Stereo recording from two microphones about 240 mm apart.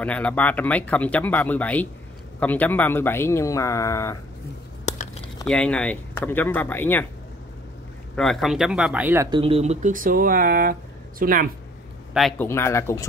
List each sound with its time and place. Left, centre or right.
0.0 s speech: centre
4.8 s a sound: left
5.5 s speech: centre
8.2 s speech: centre
9.4 s speech: right
12.1 s speech: centre